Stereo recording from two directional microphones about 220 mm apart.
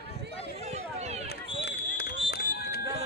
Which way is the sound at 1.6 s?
45° left (ahead or behind).